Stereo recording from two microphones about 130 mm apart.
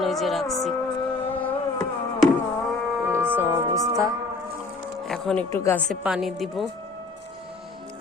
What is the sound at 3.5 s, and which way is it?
Music, 25° right (ahead or behind).